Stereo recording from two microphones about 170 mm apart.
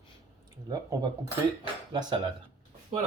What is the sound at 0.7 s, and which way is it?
Speech, 25° right (ahead or behind).